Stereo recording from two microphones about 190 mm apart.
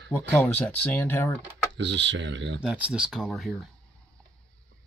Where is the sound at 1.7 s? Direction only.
65° right (ahead or behind).